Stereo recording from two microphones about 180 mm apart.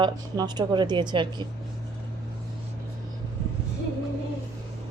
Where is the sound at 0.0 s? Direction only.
25° right (ahead or behind).